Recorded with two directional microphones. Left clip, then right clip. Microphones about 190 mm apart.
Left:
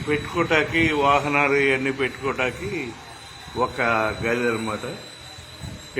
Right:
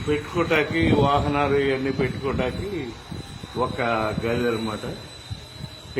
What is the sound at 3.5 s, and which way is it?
Speech, 20° right (ahead or behind).